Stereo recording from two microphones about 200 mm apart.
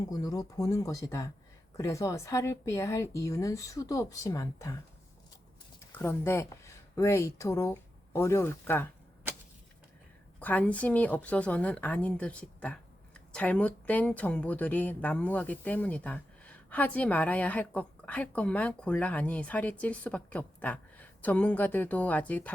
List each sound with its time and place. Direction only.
0.1 s a woman's voice: 20° left (ahead or behind)
5.9 s speech: 10° left (ahead or behind)
10.4 s a woman's voice: 10° left (ahead or behind)